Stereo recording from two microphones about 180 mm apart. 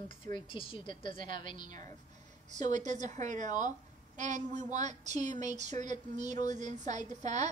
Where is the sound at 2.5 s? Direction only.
40° right (ahead or behind).